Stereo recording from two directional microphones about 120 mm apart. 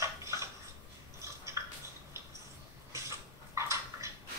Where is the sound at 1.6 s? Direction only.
25° right (ahead or behind).